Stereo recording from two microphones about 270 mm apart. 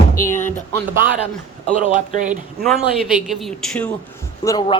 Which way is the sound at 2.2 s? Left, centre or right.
Centre.